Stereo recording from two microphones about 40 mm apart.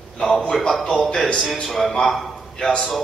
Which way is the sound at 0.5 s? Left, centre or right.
Centre.